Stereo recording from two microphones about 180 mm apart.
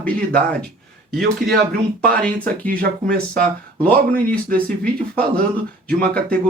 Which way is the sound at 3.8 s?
10° left (ahead or behind).